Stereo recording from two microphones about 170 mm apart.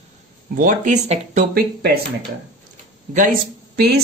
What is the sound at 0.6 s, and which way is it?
Speech, 50° right (ahead or behind).